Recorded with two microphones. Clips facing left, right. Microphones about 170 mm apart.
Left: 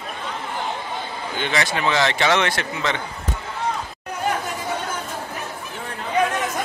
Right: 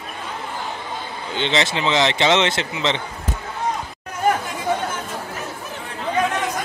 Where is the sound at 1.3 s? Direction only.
25° right (ahead or behind).